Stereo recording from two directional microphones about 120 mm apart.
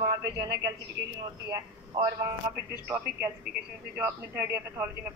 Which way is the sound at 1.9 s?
35° right (ahead or behind).